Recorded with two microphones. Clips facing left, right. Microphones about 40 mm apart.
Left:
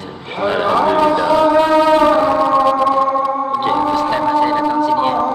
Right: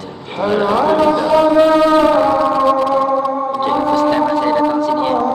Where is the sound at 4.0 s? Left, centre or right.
Centre.